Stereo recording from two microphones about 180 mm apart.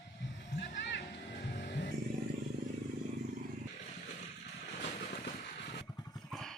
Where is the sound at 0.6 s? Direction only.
75° left (ahead or behind).